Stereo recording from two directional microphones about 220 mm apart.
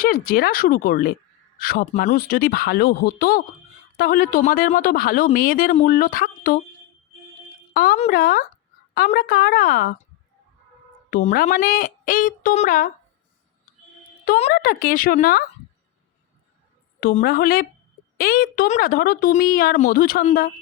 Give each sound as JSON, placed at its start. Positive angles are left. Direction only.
{"t": 0.0, "sound": "speech", "side_deg": 40}
{"t": 7.7, "sound": "a woman's voice", "side_deg": 45}
{"t": 11.1, "sound": "speech", "side_deg": 40}
{"t": 14.3, "sound": "speech", "side_deg": 30}
{"t": 14.5, "sound": "speech", "side_deg": 40}
{"t": 17.0, "sound": "speech", "side_deg": 45}